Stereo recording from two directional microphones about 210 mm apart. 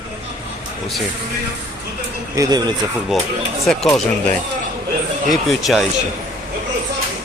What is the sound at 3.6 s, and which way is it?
Speech, centre (ahead or behind).